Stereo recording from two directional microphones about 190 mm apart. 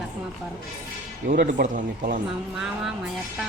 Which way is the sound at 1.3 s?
45° right (ahead or behind).